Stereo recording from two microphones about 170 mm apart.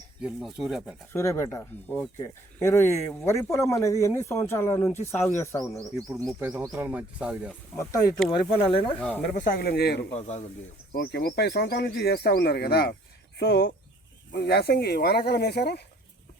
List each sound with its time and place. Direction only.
0.2 s speech: 5° right (ahead or behind)
1.1 s speech: 15° left (ahead or behind)
6.0 s a man's voice: 20° right (ahead or behind)
8.5 s speech: 30° left (ahead or behind)
9.0 s speech: 10° left (ahead or behind)
9.2 s speech: 50° left (ahead or behind); by 10.1 s 75° left (ahead or behind)
10.2 s speech: 40° left (ahead or behind)
10.9 s speech: 60° left (ahead or behind)